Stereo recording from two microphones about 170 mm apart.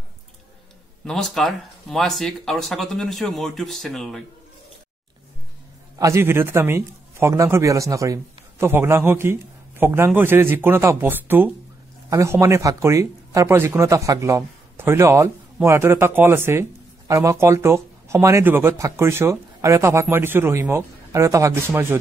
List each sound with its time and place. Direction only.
1.0 s speech: centre (ahead or behind)
5.9 s a man's voice: 15° right (ahead or behind)